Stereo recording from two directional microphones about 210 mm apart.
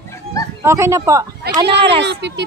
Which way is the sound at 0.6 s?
15° right (ahead or behind).